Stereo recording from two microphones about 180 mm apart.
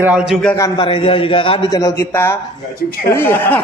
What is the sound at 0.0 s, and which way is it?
Speech, 5° right (ahead or behind).